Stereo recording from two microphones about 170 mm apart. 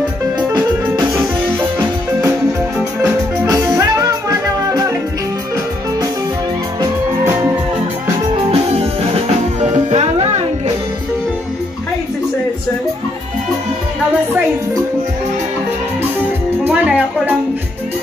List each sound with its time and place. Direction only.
0.5 s music: 20° right (ahead or behind)
3.0 s music: 20° right (ahead or behind)
8.5 s music: 35° right (ahead or behind)
16.6 s music: 10° right (ahead or behind)